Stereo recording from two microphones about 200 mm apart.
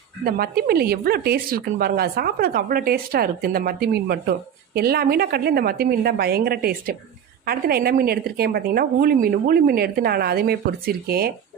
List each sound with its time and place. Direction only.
0.3 s speech: 50° right (ahead or behind)